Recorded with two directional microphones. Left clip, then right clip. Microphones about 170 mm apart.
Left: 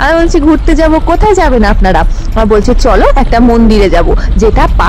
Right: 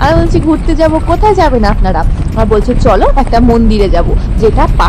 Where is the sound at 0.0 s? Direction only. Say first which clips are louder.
Left 3 dB; 40° left (ahead or behind).